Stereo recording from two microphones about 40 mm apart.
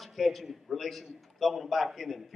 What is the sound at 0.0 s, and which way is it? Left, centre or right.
A man's voice, centre.